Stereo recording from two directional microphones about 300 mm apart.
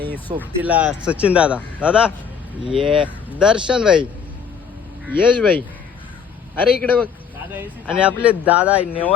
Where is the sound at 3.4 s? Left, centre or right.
Centre.